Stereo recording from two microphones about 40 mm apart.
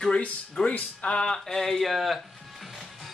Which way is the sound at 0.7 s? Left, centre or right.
Left.